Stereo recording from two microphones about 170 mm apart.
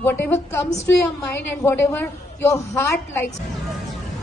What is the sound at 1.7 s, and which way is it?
A woman's voice, 15° left (ahead or behind).